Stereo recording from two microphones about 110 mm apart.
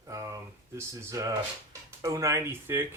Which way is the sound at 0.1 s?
30° right (ahead or behind).